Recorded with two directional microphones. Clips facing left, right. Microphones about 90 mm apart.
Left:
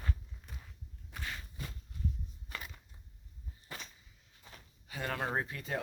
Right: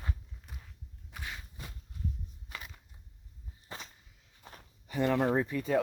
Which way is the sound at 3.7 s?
25° right (ahead or behind).